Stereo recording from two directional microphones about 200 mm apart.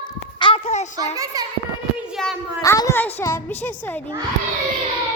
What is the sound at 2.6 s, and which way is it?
A woman's voice, 15° left (ahead or behind).